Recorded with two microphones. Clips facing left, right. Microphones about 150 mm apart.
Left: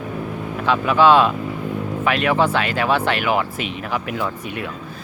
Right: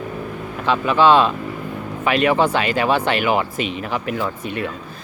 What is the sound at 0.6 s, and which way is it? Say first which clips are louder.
Speech: even; 5° left (ahead or behind).